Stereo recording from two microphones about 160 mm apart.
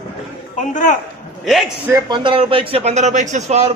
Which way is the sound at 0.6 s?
50° left (ahead or behind).